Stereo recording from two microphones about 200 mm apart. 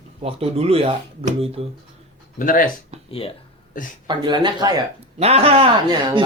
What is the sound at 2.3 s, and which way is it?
Speech, 45° left (ahead or behind).